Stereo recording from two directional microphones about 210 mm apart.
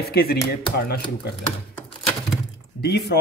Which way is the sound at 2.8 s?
50° left (ahead or behind).